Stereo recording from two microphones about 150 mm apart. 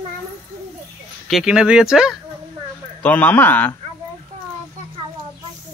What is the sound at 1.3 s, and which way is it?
Speech, centre (ahead or behind).